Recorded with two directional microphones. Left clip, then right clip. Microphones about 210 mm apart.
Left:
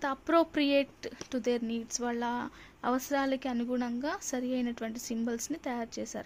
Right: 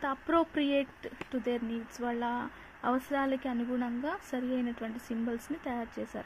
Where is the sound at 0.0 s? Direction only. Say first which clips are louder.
Left 2 dB; 15° left (ahead or behind).